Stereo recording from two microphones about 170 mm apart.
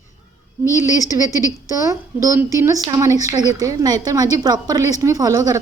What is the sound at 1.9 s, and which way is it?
A woman's voice, 20° right (ahead or behind).